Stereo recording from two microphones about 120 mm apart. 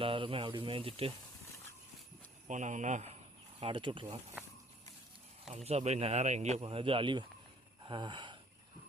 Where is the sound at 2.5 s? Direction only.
90° right.